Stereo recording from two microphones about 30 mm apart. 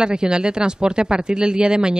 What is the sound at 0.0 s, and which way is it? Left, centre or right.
Speech, right.